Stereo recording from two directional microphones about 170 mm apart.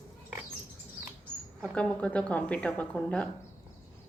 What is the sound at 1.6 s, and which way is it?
A woman's voice, 5° left (ahead or behind).